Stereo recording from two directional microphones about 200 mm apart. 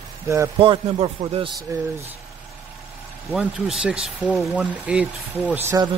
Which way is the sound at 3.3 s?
5° right (ahead or behind).